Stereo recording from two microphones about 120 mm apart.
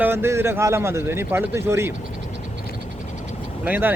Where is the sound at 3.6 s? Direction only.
15° right (ahead or behind).